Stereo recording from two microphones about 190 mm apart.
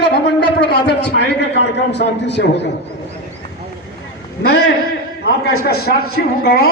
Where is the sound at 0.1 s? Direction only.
60° left (ahead or behind).